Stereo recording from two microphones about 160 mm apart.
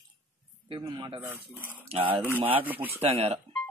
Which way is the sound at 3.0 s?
40° right (ahead or behind).